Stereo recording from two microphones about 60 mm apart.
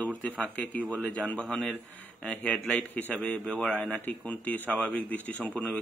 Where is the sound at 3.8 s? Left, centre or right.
Left.